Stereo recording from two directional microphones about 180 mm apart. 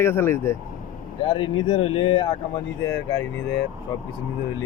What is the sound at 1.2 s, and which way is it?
Speech, 25° left (ahead or behind).